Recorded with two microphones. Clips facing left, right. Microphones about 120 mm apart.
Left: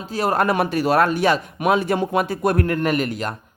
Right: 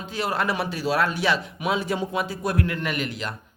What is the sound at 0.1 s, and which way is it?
Speech, 45° left (ahead or behind).